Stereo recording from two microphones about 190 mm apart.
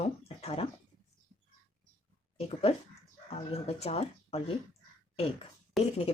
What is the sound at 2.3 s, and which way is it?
Speech, 30° left (ahead or behind).